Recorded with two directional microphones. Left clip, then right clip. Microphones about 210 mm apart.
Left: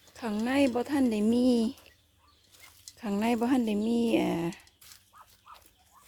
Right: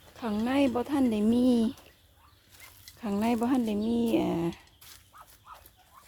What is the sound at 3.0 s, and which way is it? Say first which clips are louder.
Speech: even; 15° left (ahead or behind).